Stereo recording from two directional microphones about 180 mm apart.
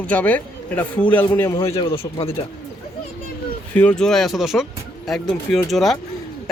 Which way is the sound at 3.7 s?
5° left (ahead or behind).